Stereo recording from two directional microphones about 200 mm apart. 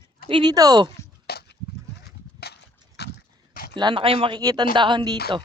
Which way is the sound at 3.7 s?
25° right (ahead or behind).